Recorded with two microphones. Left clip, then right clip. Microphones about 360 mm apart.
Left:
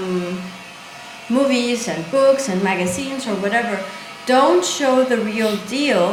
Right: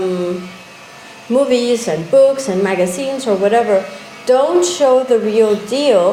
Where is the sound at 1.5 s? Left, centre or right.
Centre.